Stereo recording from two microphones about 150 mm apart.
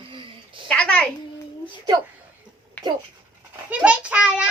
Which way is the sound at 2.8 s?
10° left (ahead or behind).